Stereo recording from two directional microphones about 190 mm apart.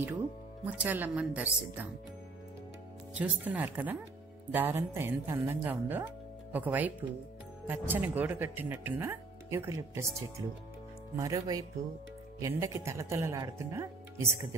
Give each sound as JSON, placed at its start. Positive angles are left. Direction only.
{"t": 0.7, "sound": "speech", "side_deg": -10}
{"t": 3.2, "sound": "speech", "side_deg": -10}